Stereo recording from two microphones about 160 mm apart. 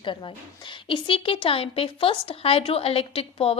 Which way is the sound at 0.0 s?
30° left (ahead or behind).